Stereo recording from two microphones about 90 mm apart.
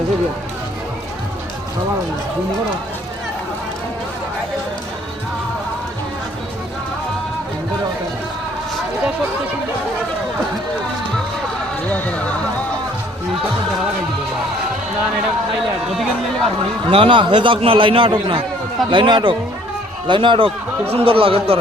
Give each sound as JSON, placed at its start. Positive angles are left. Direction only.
{"t": 11.9, "sound": "speech", "side_deg": 15}
{"t": 15.9, "sound": "speech", "side_deg": 0}
{"t": 16.9, "sound": "a man's voice", "side_deg": -75}
{"t": 20.9, "sound": "speech", "side_deg": -90}